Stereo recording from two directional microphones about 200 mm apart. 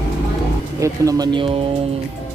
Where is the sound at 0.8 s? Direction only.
20° right (ahead or behind).